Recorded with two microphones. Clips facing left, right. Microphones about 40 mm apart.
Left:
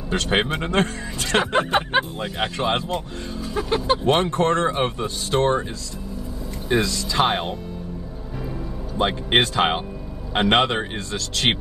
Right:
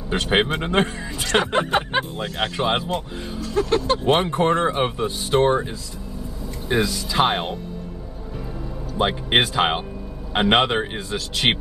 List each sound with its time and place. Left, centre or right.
0.1 s speech: centre
1.7 s speech: centre
2.5 s speech: centre
3.5 s speech: centre
4.0 s speech: centre
6.7 s speech: centre
8.9 s speech: centre